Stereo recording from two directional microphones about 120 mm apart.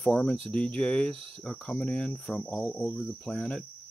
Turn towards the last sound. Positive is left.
turn(degrees=10)  # may be behind; listen again after turning